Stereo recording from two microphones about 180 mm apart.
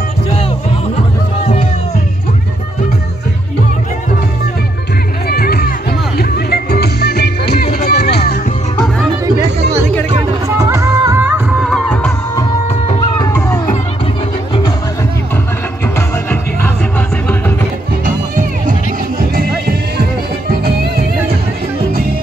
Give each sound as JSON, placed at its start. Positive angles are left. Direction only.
{"t": 1.4, "sound": "music", "side_deg": 40}
{"t": 5.3, "sound": "music", "side_deg": 55}
{"t": 10.6, "sound": "music", "side_deg": -15}
{"t": 11.5, "sound": "music", "side_deg": 0}
{"t": 12.4, "sound": "music", "side_deg": 20}
{"t": 18.0, "sound": "music", "side_deg": -45}